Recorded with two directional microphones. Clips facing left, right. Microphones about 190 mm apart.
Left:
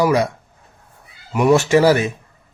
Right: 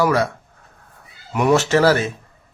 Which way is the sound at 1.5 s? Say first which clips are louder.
Left 1 dB; 15° left (ahead or behind).